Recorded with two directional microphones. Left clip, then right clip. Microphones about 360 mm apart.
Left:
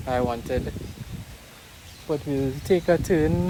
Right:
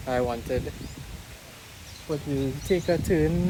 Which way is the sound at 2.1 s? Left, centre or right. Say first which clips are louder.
Left 3 dB; centre.